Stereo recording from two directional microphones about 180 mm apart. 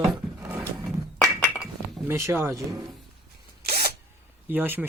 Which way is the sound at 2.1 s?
15° right (ahead or behind).